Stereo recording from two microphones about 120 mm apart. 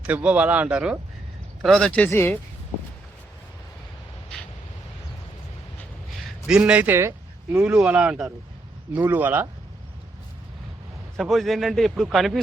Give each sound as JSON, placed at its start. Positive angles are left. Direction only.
{"t": 0.0, "sound": "a man's voice", "side_deg": -15}
{"t": 1.6, "sound": "speech", "side_deg": 5}
{"t": 6.5, "sound": "a man's voice", "side_deg": -10}
{"t": 11.2, "sound": "a man's voice", "side_deg": 0}